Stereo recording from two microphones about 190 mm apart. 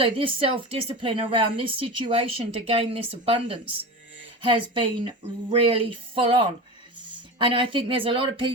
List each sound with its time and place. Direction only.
0.0 s a woman's voice: 30° right (ahead or behind)
7.3 s a woman's voice: 25° right (ahead or behind)